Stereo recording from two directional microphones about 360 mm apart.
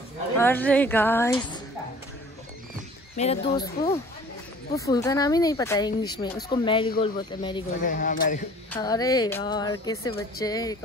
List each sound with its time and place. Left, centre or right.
0.4 s a woman's voice: centre
3.2 s speech: centre
8.7 s speech: centre